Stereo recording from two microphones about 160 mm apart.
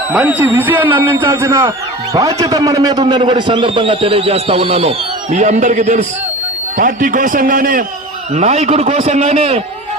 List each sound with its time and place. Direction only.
0.1 s a man's voice: 10° right (ahead or behind); by 7.9 s 60° right (ahead or behind)
8.4 s a man's voice: 45° right (ahead or behind)